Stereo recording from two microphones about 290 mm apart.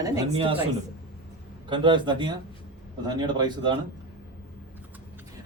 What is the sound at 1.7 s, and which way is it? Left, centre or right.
Speech, centre.